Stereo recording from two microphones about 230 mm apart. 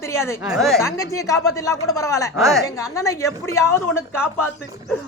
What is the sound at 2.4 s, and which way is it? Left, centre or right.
Speech, centre.